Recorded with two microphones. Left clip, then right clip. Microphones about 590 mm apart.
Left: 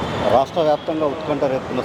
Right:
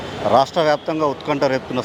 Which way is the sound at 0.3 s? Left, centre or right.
Right.